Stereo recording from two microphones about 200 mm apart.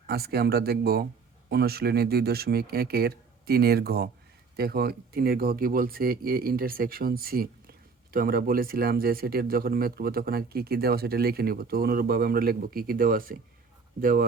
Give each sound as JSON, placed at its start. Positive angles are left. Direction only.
{"t": 0.1, "sound": "speech", "side_deg": -50}